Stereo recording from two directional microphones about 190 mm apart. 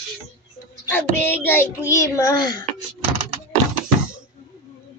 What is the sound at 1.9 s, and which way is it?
Speech, 15° left (ahead or behind).